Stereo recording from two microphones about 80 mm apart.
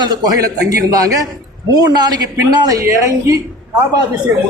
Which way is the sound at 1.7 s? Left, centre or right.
Right.